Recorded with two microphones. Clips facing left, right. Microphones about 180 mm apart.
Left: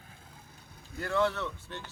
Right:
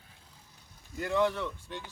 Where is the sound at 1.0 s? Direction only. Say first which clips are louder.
Right 1 dB; 15° right (ahead or behind).